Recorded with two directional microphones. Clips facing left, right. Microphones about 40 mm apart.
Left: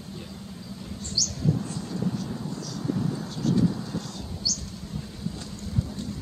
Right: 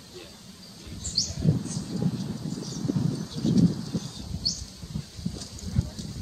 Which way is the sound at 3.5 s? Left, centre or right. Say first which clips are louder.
Right 1 dB; centre.